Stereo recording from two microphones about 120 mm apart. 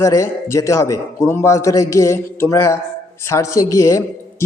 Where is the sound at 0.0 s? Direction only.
25° left (ahead or behind).